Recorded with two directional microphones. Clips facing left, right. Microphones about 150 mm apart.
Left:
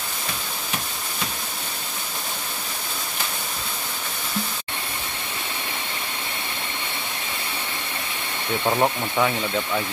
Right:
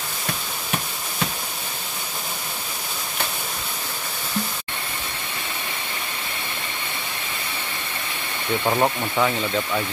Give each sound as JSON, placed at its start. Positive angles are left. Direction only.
{"t": 8.6, "sound": "speech", "side_deg": 0}